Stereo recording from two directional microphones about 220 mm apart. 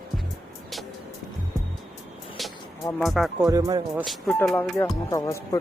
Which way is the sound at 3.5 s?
15° right (ahead or behind).